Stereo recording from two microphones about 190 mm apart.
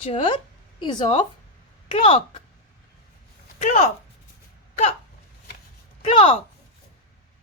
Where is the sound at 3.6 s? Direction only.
40° left (ahead or behind).